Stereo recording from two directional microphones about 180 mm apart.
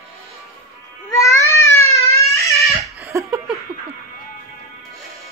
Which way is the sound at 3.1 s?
15° right (ahead or behind).